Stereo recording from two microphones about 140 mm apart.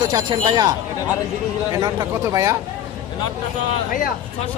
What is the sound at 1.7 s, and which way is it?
Speech, 25° right (ahead or behind).